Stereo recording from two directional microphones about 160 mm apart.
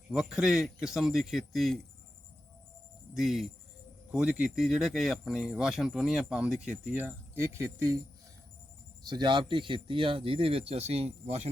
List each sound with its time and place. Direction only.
0.1 s speech: 5° right (ahead or behind)
3.2 s speech: centre (ahead or behind); by 7.9 s 15° right (ahead or behind)
9.0 s speech: 30° right (ahead or behind)